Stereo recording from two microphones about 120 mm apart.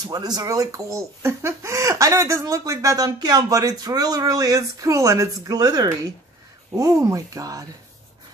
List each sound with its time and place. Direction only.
0.0 s speech: 35° right (ahead or behind)